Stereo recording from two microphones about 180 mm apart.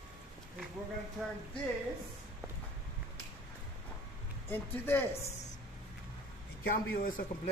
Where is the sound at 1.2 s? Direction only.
Centre (ahead or behind).